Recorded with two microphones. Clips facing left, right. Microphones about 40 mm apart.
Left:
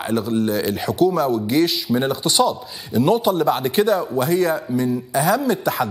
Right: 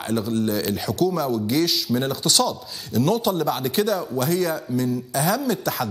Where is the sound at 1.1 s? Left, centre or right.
Centre.